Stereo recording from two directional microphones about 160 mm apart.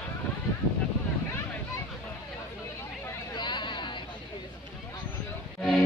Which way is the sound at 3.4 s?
30° left (ahead or behind).